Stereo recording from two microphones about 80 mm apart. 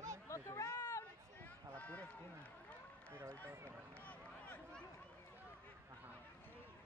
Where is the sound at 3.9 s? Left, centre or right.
Centre.